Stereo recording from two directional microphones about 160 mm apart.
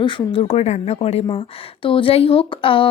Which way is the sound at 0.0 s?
30° left (ahead or behind).